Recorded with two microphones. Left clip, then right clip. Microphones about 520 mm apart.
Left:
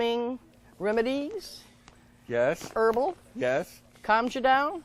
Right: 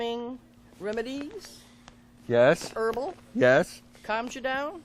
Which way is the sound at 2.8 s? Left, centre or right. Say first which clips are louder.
Left 4 dB; left.